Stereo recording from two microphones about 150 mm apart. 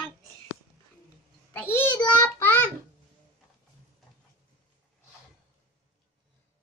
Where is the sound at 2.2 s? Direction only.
10° left (ahead or behind).